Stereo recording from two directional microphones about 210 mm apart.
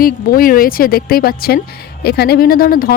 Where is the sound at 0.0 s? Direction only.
45° left (ahead or behind).